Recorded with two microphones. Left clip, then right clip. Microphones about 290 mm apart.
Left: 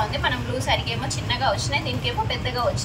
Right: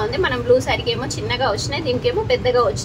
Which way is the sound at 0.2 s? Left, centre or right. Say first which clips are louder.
Right 9 dB; right.